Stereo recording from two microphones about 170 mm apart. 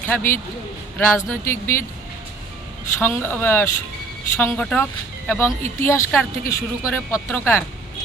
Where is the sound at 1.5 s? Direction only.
15° left (ahead or behind).